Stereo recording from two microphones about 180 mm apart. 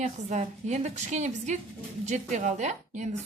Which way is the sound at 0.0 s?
40° right (ahead or behind).